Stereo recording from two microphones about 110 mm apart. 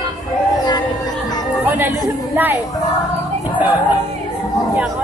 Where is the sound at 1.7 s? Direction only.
20° right (ahead or behind).